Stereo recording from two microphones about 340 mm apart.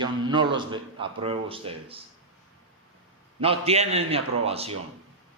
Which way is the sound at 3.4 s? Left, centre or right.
Centre.